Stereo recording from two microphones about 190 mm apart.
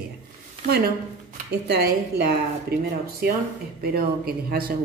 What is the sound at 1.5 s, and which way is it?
Speech, 55° right (ahead or behind).